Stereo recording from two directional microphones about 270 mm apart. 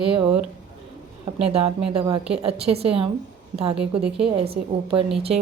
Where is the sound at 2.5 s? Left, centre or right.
Right.